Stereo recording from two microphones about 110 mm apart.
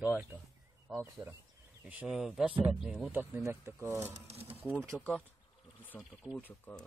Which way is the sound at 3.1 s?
20° right (ahead or behind).